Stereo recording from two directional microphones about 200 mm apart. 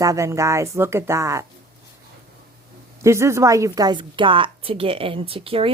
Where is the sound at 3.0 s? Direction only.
15° right (ahead or behind).